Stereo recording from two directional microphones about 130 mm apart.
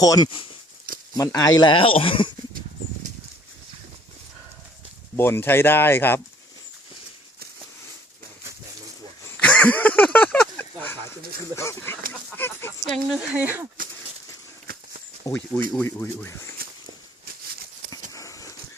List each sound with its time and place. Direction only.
0.0 s speech: 30° left (ahead or behind)
5.1 s speech: 15° left (ahead or behind)
9.4 s a sound: 10° left (ahead or behind)
11.5 s speech: 20° left (ahead or behind)
12.8 s speech: centre (ahead or behind)
13.1 s speech: 15° right (ahead or behind)
15.3 s speech: 15° left (ahead or behind)
18.1 s a sound: 25° left (ahead or behind)